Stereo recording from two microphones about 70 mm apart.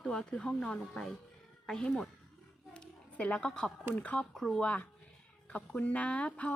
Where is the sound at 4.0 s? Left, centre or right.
Left.